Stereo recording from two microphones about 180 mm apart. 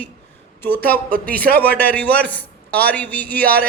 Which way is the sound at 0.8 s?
55° right (ahead or behind).